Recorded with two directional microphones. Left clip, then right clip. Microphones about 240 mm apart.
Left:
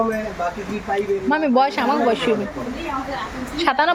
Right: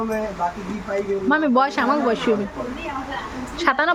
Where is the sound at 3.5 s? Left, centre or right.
Centre.